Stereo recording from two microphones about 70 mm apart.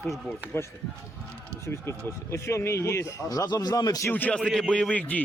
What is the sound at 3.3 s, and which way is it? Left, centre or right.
Speech, left.